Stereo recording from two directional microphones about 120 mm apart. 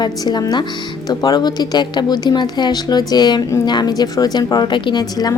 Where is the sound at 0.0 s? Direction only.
35° left (ahead or behind).